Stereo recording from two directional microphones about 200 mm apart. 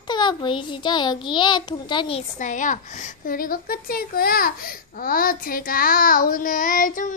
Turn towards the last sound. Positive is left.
turn(degrees=40)  # may be behind; listen again after turning